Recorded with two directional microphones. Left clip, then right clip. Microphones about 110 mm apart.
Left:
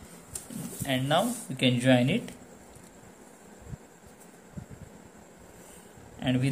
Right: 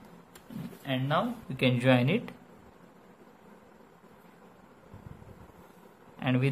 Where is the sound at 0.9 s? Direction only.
30° right (ahead or behind).